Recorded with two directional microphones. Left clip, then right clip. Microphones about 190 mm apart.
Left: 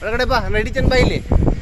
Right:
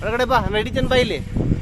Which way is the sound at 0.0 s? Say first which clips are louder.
Even; centre (ahead or behind).